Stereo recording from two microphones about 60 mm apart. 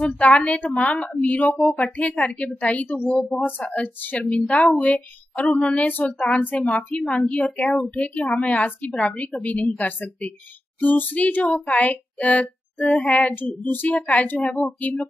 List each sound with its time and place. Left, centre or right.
0.0 s speech: left
13.3 s child singing: left
13.7 s speech: left